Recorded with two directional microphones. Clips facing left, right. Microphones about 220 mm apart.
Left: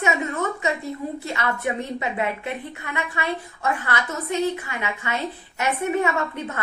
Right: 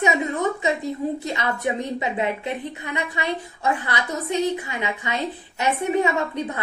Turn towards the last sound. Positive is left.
turn(degrees=-15)  # may be behind; listen again after turning